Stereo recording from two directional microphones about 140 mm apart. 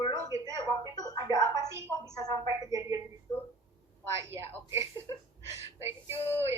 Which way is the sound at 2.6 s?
25° right (ahead or behind).